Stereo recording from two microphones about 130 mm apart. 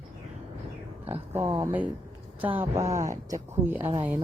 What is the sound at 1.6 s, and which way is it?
Speech, 10° right (ahead or behind).